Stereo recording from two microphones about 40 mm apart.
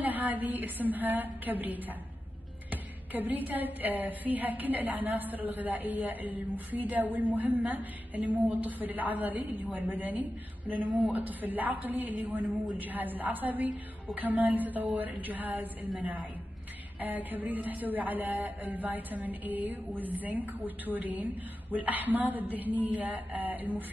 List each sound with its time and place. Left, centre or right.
0.0 s a woman's voice: right